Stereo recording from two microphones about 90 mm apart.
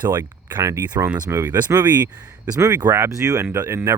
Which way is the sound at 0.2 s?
45° right (ahead or behind).